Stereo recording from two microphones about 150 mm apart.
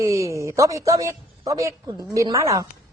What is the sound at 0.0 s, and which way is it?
A woman's voice, 20° right (ahead or behind).